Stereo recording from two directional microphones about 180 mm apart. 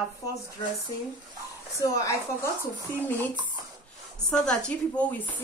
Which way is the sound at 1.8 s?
20° left (ahead or behind).